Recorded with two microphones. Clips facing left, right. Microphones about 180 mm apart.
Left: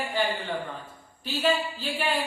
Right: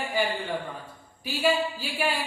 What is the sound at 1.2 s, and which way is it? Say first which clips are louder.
Speech: right 1 dB; 10° right (ahead or behind).